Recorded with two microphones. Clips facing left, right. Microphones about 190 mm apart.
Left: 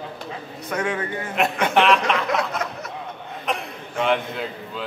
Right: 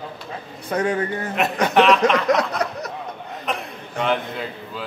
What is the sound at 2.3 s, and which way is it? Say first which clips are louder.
Speech: right 3 dB; 35° right (ahead or behind).